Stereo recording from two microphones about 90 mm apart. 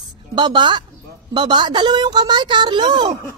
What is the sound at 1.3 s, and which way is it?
A woman's voice, 60° right (ahead or behind).